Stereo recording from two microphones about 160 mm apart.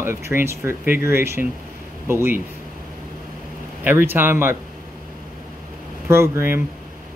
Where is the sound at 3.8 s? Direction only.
10° right (ahead or behind).